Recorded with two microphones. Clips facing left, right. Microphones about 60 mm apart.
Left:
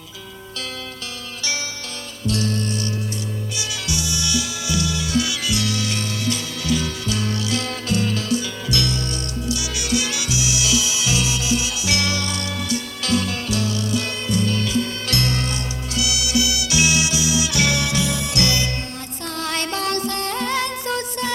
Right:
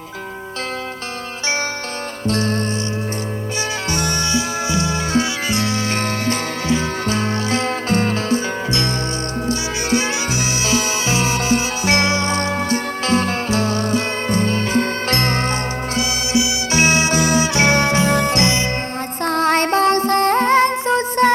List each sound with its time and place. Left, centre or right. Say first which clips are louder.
2.2 s music: right 3 dB; right
3.8 s music: right 3 dB; right
16.7 s music: right 5 dB; right
18.4 s music: right 4 dB; right
19.2 s music: right 10 dB; right
21.2 s music: right 14 dB; right